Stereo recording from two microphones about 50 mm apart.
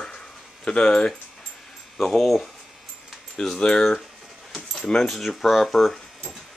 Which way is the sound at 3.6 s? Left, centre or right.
Centre.